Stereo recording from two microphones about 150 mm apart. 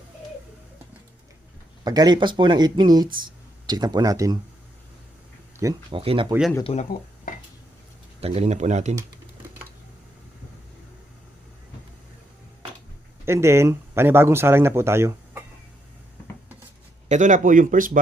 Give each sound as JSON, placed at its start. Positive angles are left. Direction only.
{"t": 1.8, "sound": "speech", "side_deg": -25}
{"t": 5.9, "sound": "speech", "side_deg": -35}
{"t": 6.7, "sound": "speech", "side_deg": 35}
{"t": 8.2, "sound": "speech", "side_deg": -40}
{"t": 13.2, "sound": "speech", "side_deg": -20}
{"t": 17.1, "sound": "speech", "side_deg": -55}